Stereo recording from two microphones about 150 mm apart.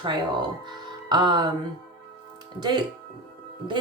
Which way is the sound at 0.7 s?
30° right (ahead or behind).